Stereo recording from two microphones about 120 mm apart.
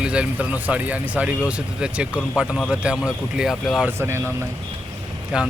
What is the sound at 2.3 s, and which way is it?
Speech, centre (ahead or behind).